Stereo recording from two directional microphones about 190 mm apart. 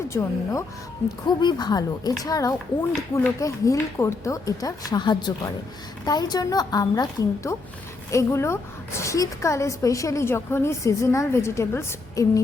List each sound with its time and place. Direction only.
0.1 s a woman's voice: 15° left (ahead or behind)